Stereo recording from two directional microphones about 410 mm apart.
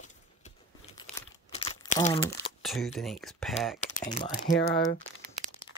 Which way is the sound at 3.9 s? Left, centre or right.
Centre.